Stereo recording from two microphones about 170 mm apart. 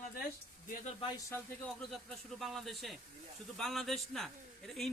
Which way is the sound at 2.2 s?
Centre (ahead or behind).